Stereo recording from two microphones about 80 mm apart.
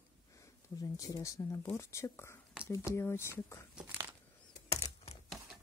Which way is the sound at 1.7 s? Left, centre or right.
Left.